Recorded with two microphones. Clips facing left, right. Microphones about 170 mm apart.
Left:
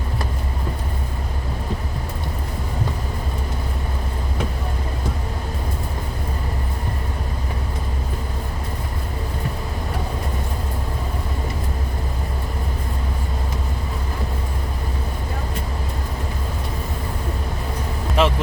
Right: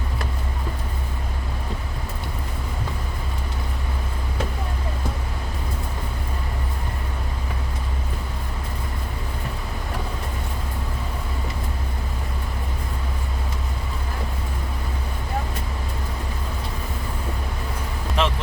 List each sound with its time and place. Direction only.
18.2 s vehicle: 10° left (ahead or behind)